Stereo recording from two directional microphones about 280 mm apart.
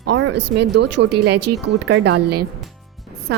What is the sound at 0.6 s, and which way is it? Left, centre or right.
A woman's voice, right.